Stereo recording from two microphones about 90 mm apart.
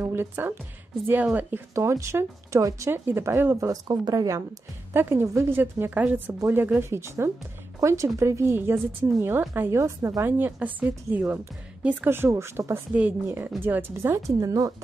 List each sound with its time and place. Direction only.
0.0 s a woman's voice: 25° right (ahead or behind)
1.8 s speech: 30° right (ahead or behind)
3.7 s speech: 50° right (ahead or behind)
4.9 s speech: 30° right (ahead or behind)
5.5 s a woman's voice: 20° right (ahead or behind)
14.2 s speech: 40° right (ahead or behind)